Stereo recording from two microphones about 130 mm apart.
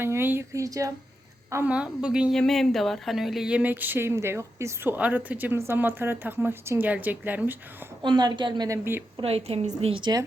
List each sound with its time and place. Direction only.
0.0 s speech: 15° right (ahead or behind)
1.6 s speech: 10° right (ahead or behind)
8.0 s a woman's voice: 35° right (ahead or behind); by 9.0 s 15° right (ahead or behind)
9.2 s a woman's voice: 50° right (ahead or behind)
10.0 s a woman's voice: 30° right (ahead or behind)